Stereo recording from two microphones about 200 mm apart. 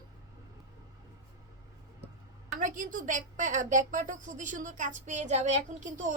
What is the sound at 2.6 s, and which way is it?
A woman's voice, 40° right (ahead or behind).